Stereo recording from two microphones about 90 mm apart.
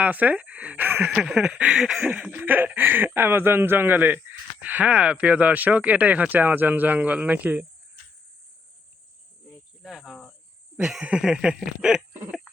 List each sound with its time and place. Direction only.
0.0 s speech: 20° right (ahead or behind)
1.0 s speech: 5° right (ahead or behind)
2.4 s speech: 20° right (ahead or behind)
9.8 s insect: 5° right (ahead or behind)
10.8 s a sound: 5° right (ahead or behind)
11.0 s speech: 10° right (ahead or behind)